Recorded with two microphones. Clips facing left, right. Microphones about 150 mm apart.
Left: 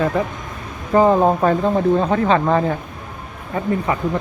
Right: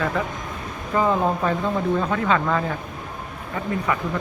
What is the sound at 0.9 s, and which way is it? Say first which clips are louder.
Speech: left 7 dB; 40° left (ahead or behind).